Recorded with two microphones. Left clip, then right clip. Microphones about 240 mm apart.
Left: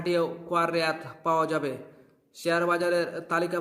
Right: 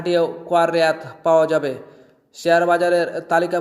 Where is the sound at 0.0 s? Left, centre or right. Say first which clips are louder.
Right 8 dB; centre.